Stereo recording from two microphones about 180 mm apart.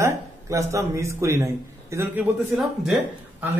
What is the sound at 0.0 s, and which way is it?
A man's voice, 15° right (ahead or behind).